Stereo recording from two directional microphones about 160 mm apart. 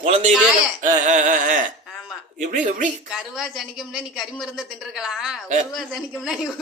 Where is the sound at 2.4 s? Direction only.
50° right (ahead or behind).